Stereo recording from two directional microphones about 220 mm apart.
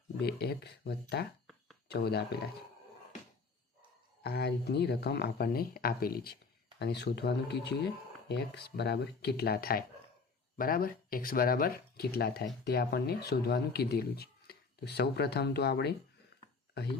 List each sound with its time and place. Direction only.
0.2 s speech: 45° left (ahead or behind)
4.2 s speech: 45° left (ahead or behind)